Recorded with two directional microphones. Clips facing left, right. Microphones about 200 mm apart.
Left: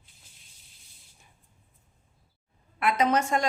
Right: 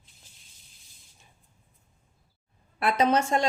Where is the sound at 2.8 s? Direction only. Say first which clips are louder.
Right 1 dB; 30° right (ahead or behind).